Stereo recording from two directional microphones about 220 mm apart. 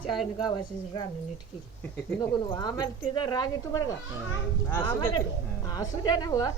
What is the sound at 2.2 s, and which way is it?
A woman's voice, 20° left (ahead or behind).